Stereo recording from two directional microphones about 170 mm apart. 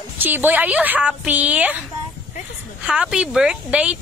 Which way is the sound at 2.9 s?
5° right (ahead or behind).